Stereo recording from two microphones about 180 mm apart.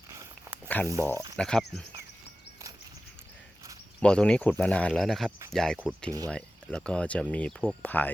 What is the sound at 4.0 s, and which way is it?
Speech, 5° left (ahead or behind).